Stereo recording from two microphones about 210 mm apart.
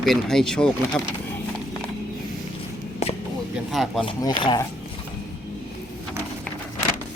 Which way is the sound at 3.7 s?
Centre (ahead or behind).